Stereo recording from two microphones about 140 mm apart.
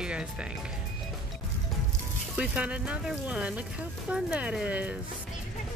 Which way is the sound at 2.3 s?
10° right (ahead or behind).